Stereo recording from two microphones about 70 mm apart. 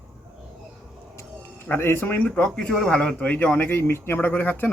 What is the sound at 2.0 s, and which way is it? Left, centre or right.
Speech, left.